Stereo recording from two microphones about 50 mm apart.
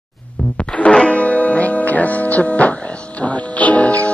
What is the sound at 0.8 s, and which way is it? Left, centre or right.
Music, left.